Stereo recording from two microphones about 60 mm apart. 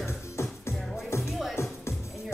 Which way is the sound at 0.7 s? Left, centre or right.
Centre.